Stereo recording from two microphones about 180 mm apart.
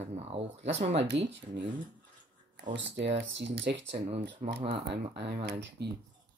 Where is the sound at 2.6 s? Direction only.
80° right.